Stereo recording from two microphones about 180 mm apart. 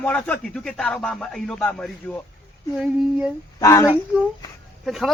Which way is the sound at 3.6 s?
20° left (ahead or behind).